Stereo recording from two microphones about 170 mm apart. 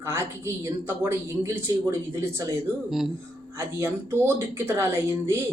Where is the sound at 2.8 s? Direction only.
Centre (ahead or behind).